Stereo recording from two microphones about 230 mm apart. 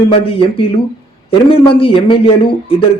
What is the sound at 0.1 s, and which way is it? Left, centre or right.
A man's voice, left.